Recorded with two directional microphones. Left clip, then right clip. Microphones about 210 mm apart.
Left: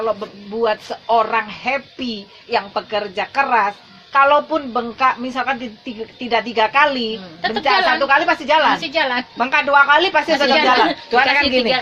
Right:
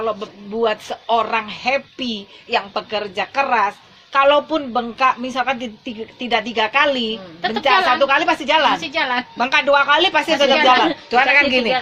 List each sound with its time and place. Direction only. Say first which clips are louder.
0.6 s a woman's voice: left 1 dB; 40° right (ahead or behind)
8.8 s a woman's voice: left 1 dB; 15° right (ahead or behind)
9.4 s a woman's voice: left 2 dB; 40° right (ahead or behind)